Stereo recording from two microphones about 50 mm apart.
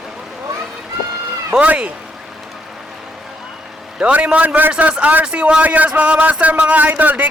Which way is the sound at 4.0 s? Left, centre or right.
Right.